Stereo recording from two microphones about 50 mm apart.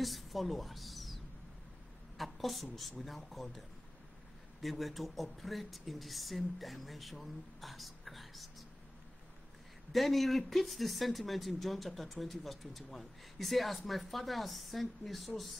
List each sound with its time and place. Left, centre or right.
0.0 s a woman's voice: centre
9.9 s speech: centre